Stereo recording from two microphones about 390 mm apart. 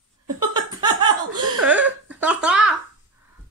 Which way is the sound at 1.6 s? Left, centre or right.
Centre.